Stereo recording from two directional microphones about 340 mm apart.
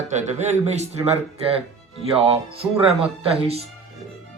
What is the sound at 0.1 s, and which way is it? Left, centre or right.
Speech, centre.